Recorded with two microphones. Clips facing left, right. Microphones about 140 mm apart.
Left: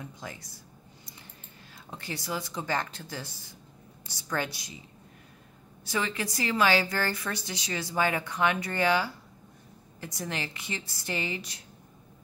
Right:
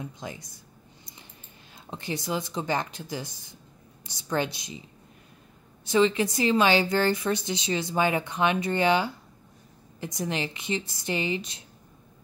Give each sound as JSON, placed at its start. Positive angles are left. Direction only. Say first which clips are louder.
{"t": 0.0, "sound": "a woman's voice", "louder": "right 4 dB", "side_deg": -20}
{"t": 1.9, "sound": "a woman's voice", "louder": "right 5 dB", "side_deg": -20}
{"t": 5.9, "sound": "a woman's voice", "louder": "right 9 dB", "side_deg": -20}